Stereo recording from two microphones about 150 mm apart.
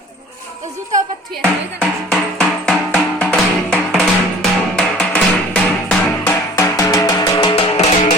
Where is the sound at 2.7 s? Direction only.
5° left (ahead or behind).